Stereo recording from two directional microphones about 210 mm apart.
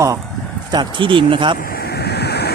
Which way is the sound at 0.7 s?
20° right (ahead or behind).